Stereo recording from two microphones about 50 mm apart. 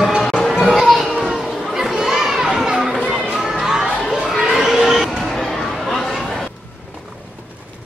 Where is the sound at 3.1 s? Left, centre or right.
Centre.